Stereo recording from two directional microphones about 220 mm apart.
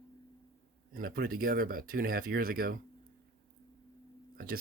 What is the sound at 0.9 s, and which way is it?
Speech, 40° right (ahead or behind).